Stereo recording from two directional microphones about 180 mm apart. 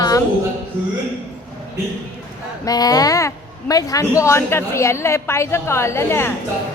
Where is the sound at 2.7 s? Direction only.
20° left (ahead or behind).